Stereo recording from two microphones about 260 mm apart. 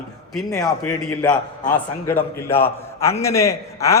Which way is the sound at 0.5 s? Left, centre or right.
Centre.